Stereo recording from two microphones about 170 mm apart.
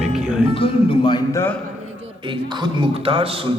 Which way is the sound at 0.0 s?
5° right (ahead or behind).